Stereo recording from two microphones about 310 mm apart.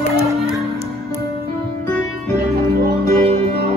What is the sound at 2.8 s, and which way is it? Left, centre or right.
Music, right.